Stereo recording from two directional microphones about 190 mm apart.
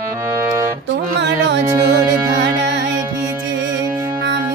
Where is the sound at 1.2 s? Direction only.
70° right (ahead or behind).